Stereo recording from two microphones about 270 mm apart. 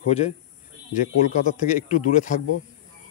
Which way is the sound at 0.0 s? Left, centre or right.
Left.